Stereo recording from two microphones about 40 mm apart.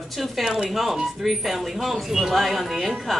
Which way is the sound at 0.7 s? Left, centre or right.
Centre.